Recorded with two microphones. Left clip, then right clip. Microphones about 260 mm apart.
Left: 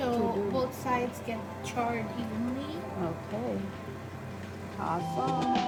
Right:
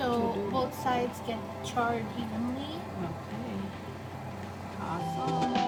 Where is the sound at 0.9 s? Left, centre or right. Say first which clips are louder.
Even; centre.